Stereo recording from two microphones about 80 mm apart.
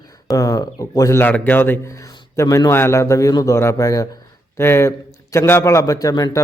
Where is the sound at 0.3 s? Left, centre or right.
Left.